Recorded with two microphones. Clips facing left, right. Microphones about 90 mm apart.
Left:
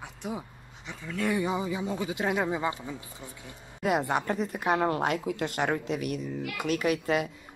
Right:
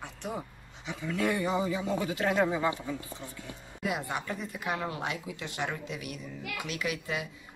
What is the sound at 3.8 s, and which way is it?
Speech, 45° left (ahead or behind).